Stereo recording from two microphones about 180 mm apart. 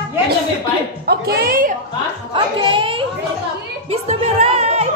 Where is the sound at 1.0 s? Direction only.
60° right (ahead or behind).